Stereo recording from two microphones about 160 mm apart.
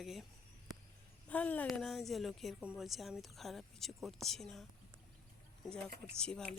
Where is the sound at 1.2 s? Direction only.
10° left (ahead or behind).